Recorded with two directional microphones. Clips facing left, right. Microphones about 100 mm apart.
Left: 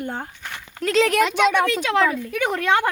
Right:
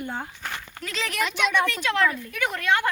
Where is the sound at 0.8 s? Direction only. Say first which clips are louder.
Left 11 dB; 90° left.